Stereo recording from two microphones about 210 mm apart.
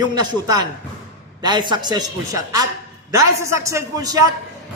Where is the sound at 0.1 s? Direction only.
20° right (ahead or behind).